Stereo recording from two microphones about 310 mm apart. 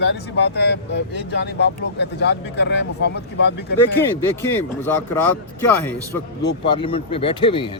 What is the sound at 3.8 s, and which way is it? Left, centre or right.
Speech, centre.